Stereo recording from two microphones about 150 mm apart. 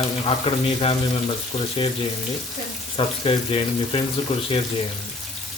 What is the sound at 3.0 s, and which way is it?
Speech, 35° left (ahead or behind).